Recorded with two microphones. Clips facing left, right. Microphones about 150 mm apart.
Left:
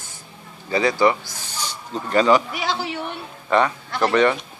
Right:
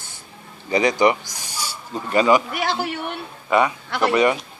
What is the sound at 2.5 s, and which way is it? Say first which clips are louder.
Speech: right 2 dB; 55° right (ahead or behind).